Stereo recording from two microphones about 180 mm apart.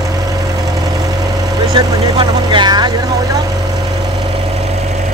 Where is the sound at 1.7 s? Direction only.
25° right (ahead or behind).